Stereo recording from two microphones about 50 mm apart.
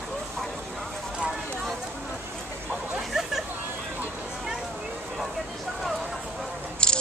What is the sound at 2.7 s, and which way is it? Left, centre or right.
Hubbub, centre.